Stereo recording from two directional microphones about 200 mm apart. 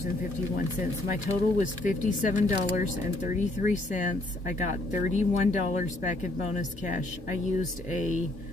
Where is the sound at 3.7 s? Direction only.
40° left (ahead or behind).